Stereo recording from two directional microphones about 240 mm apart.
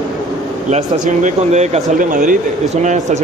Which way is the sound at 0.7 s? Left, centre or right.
Right.